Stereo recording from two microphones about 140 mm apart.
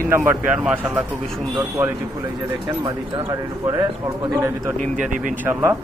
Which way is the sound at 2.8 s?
35° right (ahead or behind).